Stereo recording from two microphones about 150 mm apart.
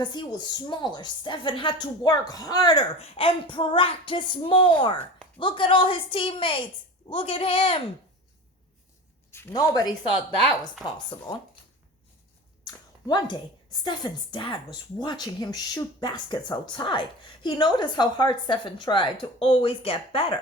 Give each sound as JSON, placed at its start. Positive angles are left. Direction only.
{"t": 0.0, "sound": "a woman's voice", "side_deg": 30}
{"t": 3.0, "sound": "speech", "side_deg": 40}
{"t": 9.5, "sound": "a woman's voice", "side_deg": 25}
{"t": 12.6, "sound": "a sound", "side_deg": 30}
{"t": 13.8, "sound": "speech", "side_deg": 30}